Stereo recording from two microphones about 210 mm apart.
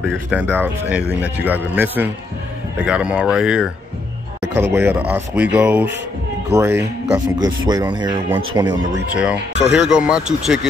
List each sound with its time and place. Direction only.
0.0 s speech: centre (ahead or behind)
4.7 s speech: 10° right (ahead or behind)
9.1 s speech: 5° right (ahead or behind)